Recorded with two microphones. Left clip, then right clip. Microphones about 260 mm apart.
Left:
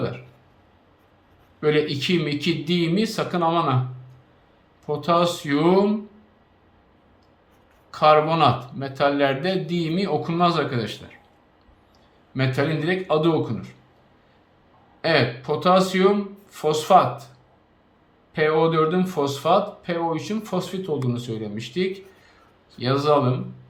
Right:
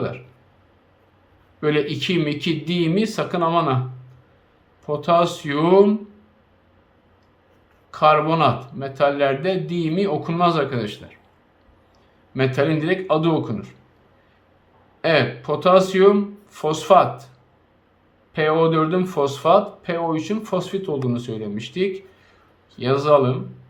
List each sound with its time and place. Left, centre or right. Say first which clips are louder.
1.6 s speech: even; centre
4.9 s speech: right 3 dB; centre
7.9 s speech: right 1 dB; centre
12.3 s speech: right 4 dB; centre
15.0 s speech: right 2 dB; centre
18.3 s speech: right 1 dB; centre